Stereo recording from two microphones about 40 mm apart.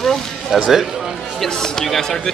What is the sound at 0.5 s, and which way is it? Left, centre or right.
Speech, centre.